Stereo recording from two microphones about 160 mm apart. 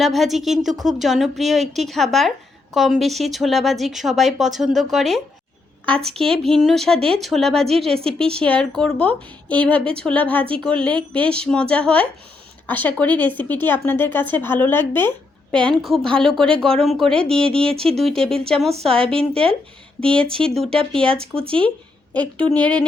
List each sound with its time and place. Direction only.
0.0 s speech: centre (ahead or behind)
17.5 s speech: 35° right (ahead or behind)
18.0 s speech: centre (ahead or behind)
19.3 s speech: 35° right (ahead or behind)
20.3 s speech: 5° left (ahead or behind)